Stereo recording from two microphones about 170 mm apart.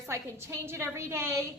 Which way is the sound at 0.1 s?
15° right (ahead or behind).